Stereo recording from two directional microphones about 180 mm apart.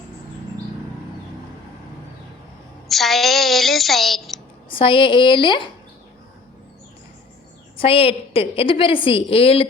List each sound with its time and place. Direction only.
2.9 s a sound: centre (ahead or behind)
4.7 s a woman's voice: 30° left (ahead or behind)
7.8 s a woman's voice: 30° left (ahead or behind)